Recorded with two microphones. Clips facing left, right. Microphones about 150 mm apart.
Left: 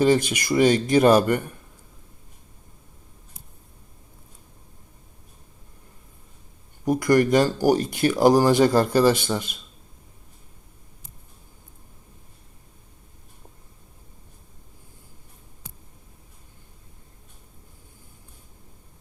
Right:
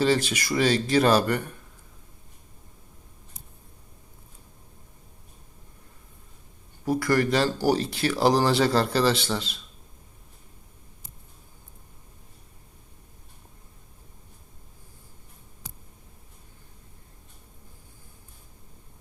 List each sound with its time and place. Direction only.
0.0 s speech: 15° left (ahead or behind)
6.8 s speech: 15° left (ahead or behind)